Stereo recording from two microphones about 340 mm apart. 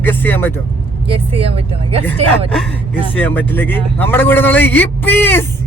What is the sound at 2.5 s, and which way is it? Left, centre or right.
A man's voice, centre.